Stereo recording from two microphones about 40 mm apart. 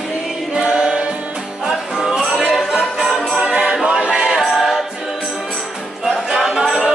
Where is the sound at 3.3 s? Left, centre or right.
Right.